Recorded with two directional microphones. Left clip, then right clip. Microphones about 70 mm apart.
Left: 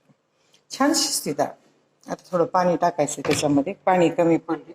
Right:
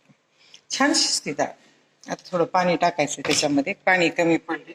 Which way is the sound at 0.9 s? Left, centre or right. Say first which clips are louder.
Right 1 dB; left.